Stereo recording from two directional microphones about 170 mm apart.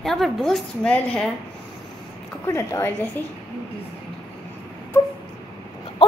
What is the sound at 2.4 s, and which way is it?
Speech, 15° left (ahead or behind).